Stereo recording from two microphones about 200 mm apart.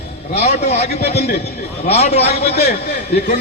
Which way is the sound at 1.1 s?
55° left (ahead or behind).